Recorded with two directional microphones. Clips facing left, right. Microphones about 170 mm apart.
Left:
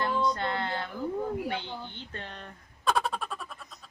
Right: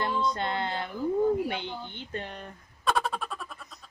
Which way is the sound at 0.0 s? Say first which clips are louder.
Even; 20° right (ahead or behind).